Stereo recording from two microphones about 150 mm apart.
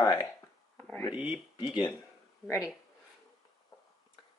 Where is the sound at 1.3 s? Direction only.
30° left (ahead or behind).